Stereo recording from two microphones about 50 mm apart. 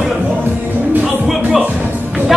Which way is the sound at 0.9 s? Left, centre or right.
Right.